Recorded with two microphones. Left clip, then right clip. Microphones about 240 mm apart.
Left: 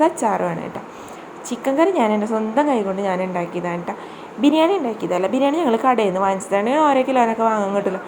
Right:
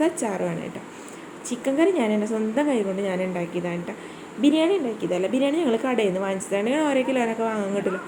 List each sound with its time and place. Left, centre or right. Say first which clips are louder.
0.0 s a woman's voice: left 7 dB; centre